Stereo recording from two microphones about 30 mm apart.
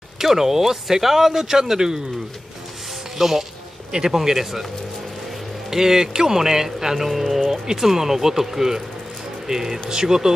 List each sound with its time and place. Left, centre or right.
0.2 s speech: centre
3.2 s speech: centre
5.7 s speech: centre
7.1 s speech: centre